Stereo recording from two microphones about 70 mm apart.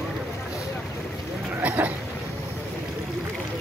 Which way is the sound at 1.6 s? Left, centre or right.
Right.